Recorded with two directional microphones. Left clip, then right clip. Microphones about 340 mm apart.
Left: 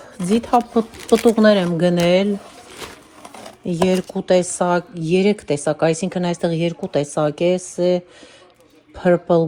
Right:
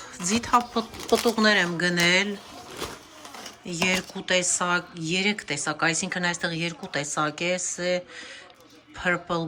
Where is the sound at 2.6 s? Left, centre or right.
Centre.